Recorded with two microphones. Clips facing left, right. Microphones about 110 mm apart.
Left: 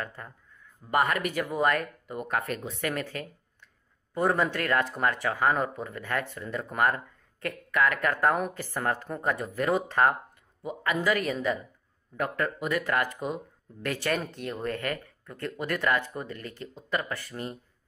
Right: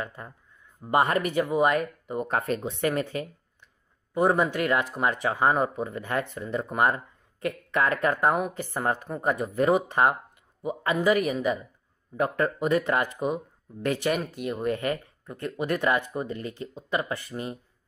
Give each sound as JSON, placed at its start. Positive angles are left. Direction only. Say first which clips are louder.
{"t": 0.0, "sound": "speech", "louder": "right 2 dB", "side_deg": -15}
{"t": 0.8, "sound": "speech", "louder": "right 3 dB", "side_deg": -25}
{"t": 12.2, "sound": "speech", "louder": "right 4 dB", "side_deg": -25}
{"t": 14.2, "sound": "speech", "louder": "right 4 dB", "side_deg": -5}